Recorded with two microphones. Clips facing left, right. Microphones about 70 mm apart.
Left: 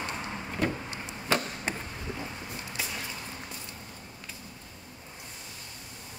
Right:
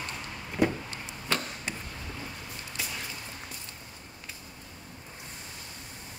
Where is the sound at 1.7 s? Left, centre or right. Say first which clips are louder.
Left 5 dB; left.